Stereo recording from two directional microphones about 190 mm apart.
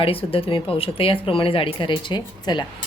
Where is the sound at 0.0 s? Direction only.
30° left (ahead or behind).